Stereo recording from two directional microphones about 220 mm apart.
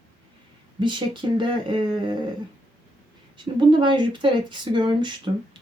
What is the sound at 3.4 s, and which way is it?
Speech, 20° right (ahead or behind).